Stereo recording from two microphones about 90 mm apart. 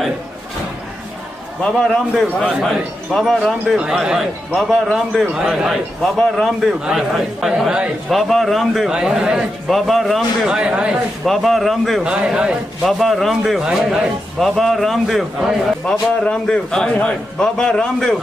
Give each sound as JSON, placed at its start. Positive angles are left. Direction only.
{"t": 1.6, "sound": "a man's voice", "side_deg": 10}
{"t": 5.3, "sound": "a man's voice", "side_deg": -5}
{"t": 10.5, "sound": "speech", "side_deg": -10}
{"t": 11.2, "sound": "a man's voice", "side_deg": 0}
{"t": 12.1, "sound": "speech", "side_deg": -10}
{"t": 12.8, "sound": "a man's voice", "side_deg": 0}